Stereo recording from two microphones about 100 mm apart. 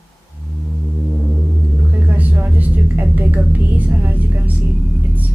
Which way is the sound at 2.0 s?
15° right (ahead or behind).